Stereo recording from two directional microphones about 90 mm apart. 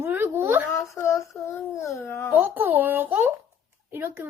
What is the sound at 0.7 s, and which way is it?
Speech, 30° left (ahead or behind).